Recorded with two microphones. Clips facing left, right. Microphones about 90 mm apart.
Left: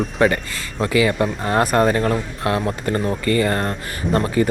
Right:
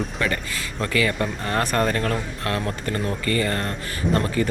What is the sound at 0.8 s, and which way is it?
Speech, 20° left (ahead or behind).